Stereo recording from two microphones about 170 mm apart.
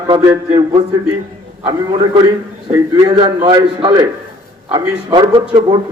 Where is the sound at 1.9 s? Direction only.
25° right (ahead or behind).